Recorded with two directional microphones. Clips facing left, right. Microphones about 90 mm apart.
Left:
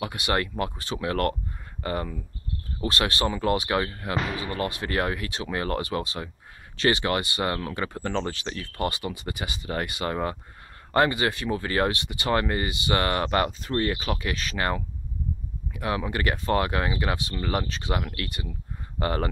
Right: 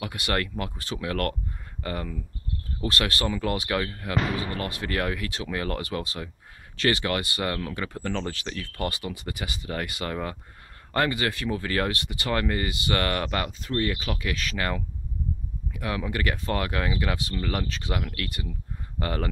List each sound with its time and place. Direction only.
0.0 s speech: 25° left (ahead or behind)